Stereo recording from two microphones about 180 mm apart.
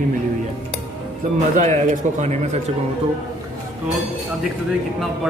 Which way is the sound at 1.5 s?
45° right (ahead or behind).